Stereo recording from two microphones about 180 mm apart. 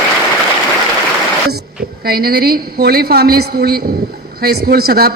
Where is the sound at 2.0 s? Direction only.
55° right (ahead or behind).